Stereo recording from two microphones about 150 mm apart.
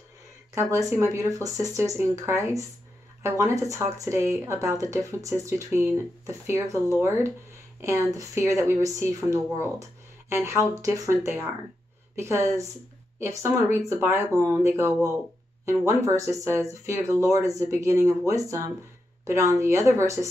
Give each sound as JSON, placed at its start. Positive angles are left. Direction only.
{"t": 0.6, "sound": "speech", "side_deg": -20}